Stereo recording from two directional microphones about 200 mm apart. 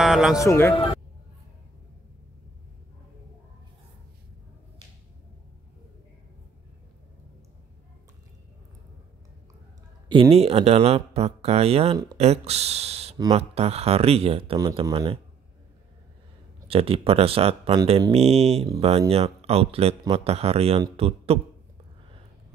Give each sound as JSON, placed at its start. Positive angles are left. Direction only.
{"t": 0.0, "sound": "a man's voice", "side_deg": -5}
{"t": 0.4, "sound": "a man's voice", "side_deg": 15}
{"t": 10.0, "sound": "speech", "side_deg": -25}
{"t": 16.6, "sound": "speech", "side_deg": -30}